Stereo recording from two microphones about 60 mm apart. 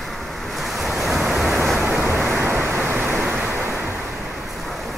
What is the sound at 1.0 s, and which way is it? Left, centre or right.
Waves, centre.